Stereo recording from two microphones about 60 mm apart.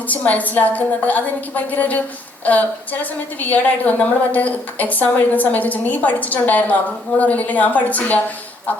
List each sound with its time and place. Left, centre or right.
0.1 s a woman's voice: left